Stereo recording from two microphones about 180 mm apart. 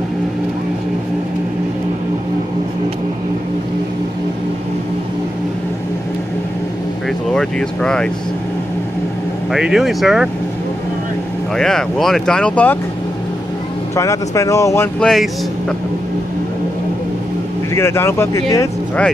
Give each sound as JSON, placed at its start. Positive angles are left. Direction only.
{"t": 7.3, "sound": "speech", "side_deg": 5}
{"t": 9.5, "sound": "speech", "side_deg": -5}
{"t": 11.5, "sound": "speech", "side_deg": 5}
{"t": 13.9, "sound": "speech", "side_deg": 15}
{"t": 15.0, "sound": "speech", "side_deg": 0}
{"t": 17.7, "sound": "speech", "side_deg": 15}